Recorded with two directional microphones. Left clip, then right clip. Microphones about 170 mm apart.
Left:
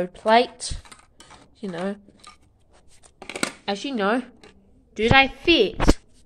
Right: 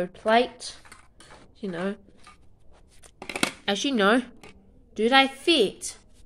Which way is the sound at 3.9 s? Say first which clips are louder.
Right 2 dB; 15° right (ahead or behind).